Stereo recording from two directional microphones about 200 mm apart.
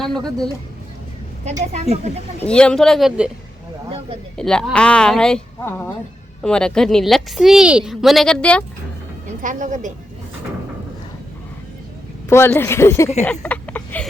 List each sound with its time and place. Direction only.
0.2 s speech: 20° right (ahead or behind)
1.7 s speech: 35° right (ahead or behind)
2.4 s a woman's voice: 5° left (ahead or behind)
3.8 s a sound: 30° right (ahead or behind)
4.4 s a woman's voice: 5° left (ahead or behind)
9.4 s speech: 40° right (ahead or behind)
12.3 s speech: 10° left (ahead or behind)
13.2 s a sound: 5° left (ahead or behind)